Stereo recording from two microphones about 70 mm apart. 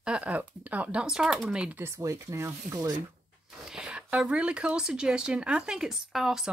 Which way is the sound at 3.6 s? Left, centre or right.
Centre.